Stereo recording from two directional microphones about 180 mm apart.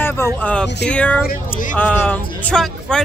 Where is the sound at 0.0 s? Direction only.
10° left (ahead or behind).